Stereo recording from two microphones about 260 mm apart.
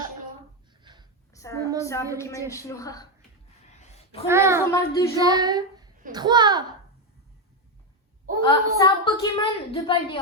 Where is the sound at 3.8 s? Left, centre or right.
Left.